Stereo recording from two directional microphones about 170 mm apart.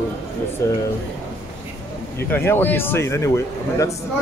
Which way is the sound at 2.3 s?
10° left (ahead or behind).